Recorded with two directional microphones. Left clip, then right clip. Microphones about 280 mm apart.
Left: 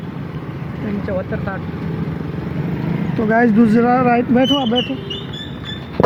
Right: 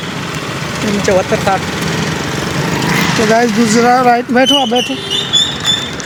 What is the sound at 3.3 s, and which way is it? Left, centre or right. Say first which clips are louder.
Speech: even; centre.